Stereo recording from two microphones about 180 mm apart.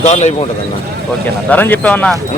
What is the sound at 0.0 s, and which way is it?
Speech, 40° left (ahead or behind).